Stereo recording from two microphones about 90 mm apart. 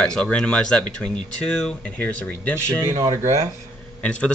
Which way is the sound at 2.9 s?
40° right (ahead or behind).